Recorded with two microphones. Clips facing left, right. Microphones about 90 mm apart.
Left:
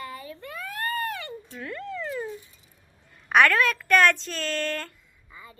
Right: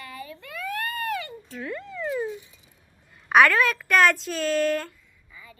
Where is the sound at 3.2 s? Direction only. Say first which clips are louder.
Right 2 dB; centre (ahead or behind).